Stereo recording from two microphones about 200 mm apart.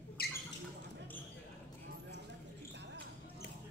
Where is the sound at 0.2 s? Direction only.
50° left (ahead or behind).